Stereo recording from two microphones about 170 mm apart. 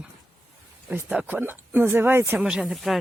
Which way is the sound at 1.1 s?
10° right (ahead or behind).